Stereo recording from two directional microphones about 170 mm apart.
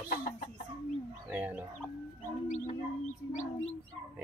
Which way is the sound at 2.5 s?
45° left (ahead or behind).